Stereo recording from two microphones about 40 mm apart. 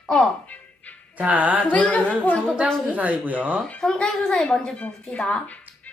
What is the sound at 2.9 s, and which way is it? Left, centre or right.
Speech, right.